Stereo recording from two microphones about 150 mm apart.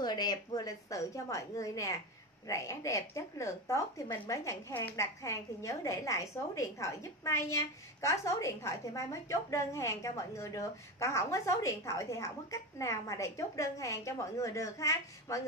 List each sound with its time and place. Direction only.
0.0 s a woman's voice: 30° left (ahead or behind)